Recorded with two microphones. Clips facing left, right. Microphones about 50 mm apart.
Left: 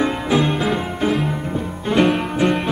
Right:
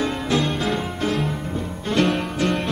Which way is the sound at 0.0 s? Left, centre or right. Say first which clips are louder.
Left 4 dB; centre.